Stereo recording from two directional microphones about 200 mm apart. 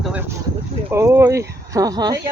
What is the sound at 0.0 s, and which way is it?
Boat, 10° right (ahead or behind).